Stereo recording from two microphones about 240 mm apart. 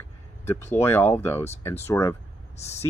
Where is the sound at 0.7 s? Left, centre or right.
Centre.